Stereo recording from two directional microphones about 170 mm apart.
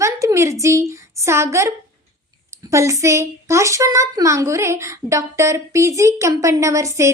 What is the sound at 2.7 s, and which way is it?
A woman's voice, 15° right (ahead or behind).